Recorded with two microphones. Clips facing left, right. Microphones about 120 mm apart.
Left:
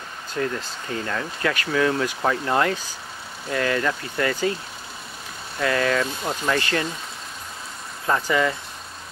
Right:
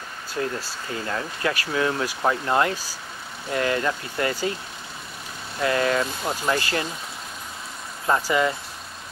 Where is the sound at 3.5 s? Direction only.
30° right (ahead or behind).